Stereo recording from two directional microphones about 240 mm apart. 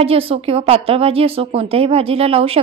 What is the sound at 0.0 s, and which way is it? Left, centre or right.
Speech, right.